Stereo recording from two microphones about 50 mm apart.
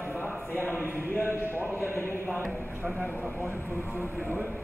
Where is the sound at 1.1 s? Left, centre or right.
Left.